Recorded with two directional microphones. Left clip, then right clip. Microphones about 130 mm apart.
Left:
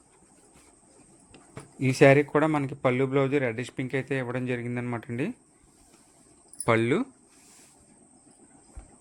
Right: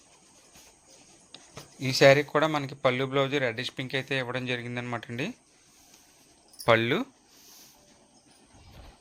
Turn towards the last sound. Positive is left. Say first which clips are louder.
# right 1 dB
turn(degrees=10)  # may be behind; listen again after turning